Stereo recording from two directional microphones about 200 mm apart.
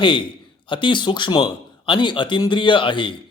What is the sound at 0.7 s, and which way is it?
A man's voice, 25° left (ahead or behind).